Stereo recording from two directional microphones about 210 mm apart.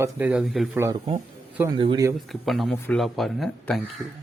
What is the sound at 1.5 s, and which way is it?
Speech, 10° right (ahead or behind).